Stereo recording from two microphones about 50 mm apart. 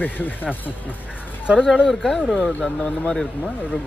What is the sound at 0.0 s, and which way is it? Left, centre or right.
Speech, left.